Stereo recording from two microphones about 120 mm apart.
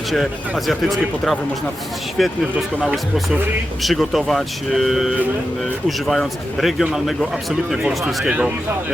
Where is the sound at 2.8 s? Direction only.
10° right (ahead or behind).